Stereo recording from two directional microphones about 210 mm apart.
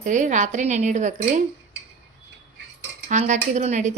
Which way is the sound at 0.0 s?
35° right (ahead or behind).